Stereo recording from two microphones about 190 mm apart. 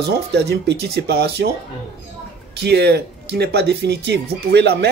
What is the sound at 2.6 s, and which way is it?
Speech, 60° right (ahead or behind).